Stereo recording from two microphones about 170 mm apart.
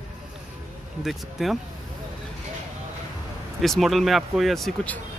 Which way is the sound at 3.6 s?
Centre (ahead or behind).